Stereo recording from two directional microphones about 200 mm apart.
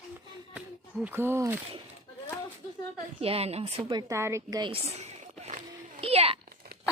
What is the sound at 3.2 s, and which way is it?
Speech, 30° right (ahead or behind).